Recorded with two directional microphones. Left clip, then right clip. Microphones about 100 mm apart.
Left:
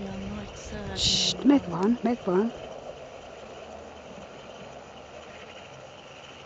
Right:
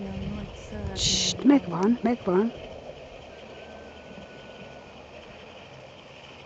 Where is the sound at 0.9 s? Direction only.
Centre (ahead or behind).